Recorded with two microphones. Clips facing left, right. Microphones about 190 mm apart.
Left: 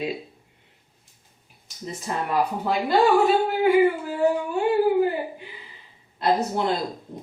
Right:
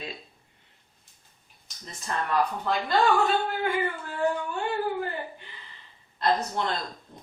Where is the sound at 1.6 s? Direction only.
5° left (ahead or behind).